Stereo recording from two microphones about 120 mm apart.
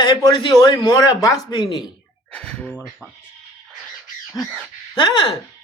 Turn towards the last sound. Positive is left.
turn(degrees=40)  # may be behind; listen again after turning